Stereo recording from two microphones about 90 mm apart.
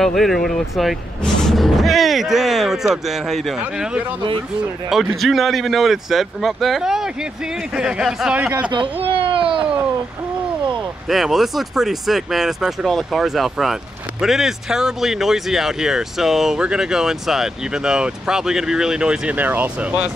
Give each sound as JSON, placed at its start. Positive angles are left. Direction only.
{"t": 0.0, "sound": "speech", "side_deg": 5}
{"t": 8.4, "sound": "speech", "side_deg": -15}
{"t": 8.6, "sound": "speech", "side_deg": -65}
{"t": 9.0, "sound": "a sound", "side_deg": -85}
{"t": 11.1, "sound": "speech", "side_deg": 0}